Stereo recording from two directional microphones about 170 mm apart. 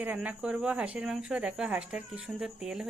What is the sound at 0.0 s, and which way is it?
Speech, 10° right (ahead or behind).